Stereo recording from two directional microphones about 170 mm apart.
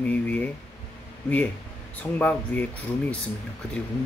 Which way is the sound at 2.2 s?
10° left (ahead or behind).